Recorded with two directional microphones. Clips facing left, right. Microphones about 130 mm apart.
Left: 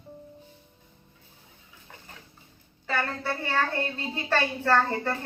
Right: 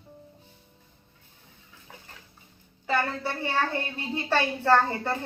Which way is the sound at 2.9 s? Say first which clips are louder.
Right 2 dB; 15° right (ahead or behind).